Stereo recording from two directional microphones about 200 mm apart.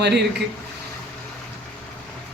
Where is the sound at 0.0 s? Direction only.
55° right (ahead or behind).